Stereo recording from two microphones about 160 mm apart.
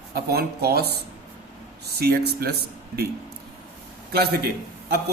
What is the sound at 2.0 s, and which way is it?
A man's voice, 80° right.